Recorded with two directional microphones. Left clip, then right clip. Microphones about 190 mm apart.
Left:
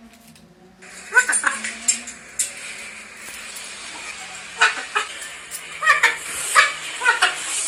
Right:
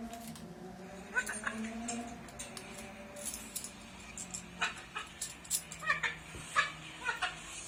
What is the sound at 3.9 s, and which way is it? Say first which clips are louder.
Chicken: left 14 dB; 50° left (ahead or behind).